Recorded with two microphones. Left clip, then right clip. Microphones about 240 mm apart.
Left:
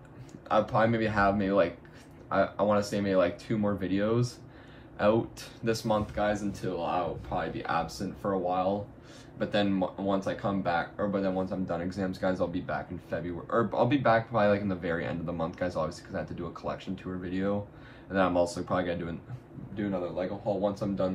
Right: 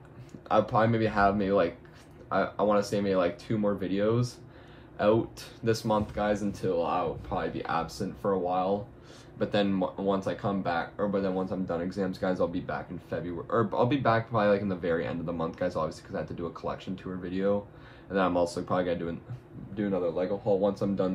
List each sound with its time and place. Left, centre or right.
0.5 s a man's voice: centre